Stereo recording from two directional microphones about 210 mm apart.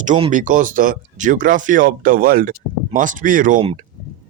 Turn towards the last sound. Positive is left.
turn(degrees=-30)  # may be behind; listen again after turning